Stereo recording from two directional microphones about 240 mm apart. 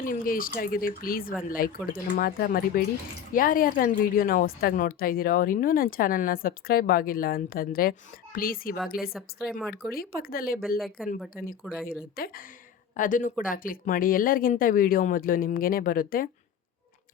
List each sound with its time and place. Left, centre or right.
0.1 s speech: left
9.1 s speech: centre
9.9 s speech: left
10.8 s speech: centre
12.1 s speech: left